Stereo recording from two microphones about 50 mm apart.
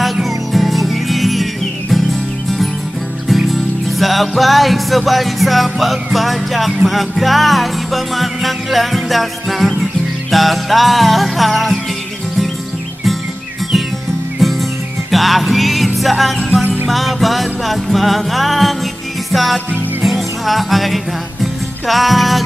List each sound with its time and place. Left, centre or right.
0.0 s music: centre
3.3 s music: centre
14.4 s music: centre